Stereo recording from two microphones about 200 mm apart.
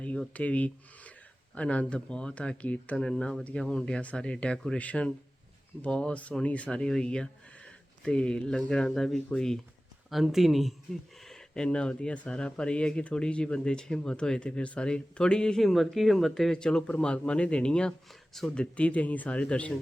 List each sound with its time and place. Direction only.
0.0 s speech: 5° left (ahead or behind)